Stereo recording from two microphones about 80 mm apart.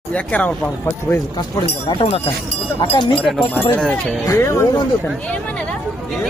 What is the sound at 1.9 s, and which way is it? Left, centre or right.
Speech, left.